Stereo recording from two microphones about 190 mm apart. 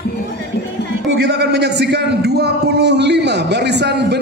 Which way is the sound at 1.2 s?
60° right (ahead or behind).